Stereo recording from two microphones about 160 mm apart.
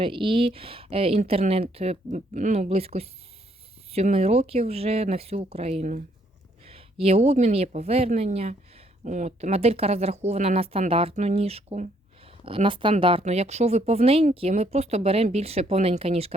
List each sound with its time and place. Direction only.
0.0 s speech: 35° right (ahead or behind)
7.0 s speech: 40° right (ahead or behind)